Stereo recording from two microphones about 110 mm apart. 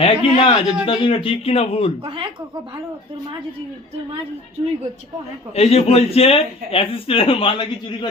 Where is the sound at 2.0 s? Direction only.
50° right (ahead or behind).